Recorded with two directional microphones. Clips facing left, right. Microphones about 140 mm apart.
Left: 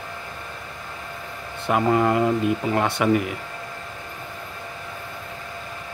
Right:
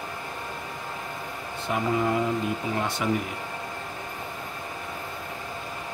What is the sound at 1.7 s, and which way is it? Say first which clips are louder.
Speech: left 6 dB; 65° left (ahead or behind).